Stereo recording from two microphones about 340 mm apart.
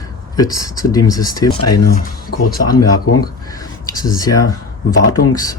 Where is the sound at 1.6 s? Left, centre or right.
Left.